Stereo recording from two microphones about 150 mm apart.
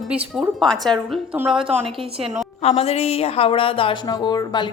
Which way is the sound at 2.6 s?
45° left (ahead or behind).